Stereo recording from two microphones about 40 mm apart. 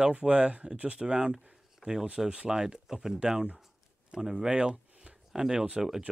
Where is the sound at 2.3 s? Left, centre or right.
Centre.